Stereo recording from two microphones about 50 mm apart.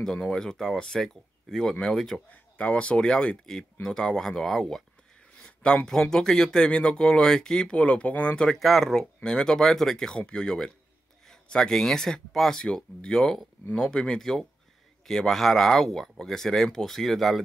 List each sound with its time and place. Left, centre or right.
0.0 s speech: centre
2.6 s speech: left
3.5 s speech: centre
5.4 s a sound: centre
5.9 s speech: centre
7.7 s speech: left
8.5 s speech: centre